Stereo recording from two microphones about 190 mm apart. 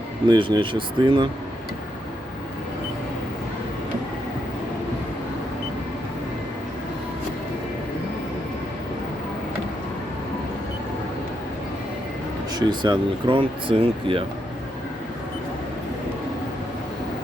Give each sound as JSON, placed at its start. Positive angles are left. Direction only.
{"t": 0.3, "sound": "speech", "side_deg": -25}
{"t": 12.5, "sound": "speech", "side_deg": -25}